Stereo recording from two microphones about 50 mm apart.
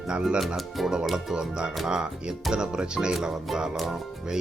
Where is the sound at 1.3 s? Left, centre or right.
Centre.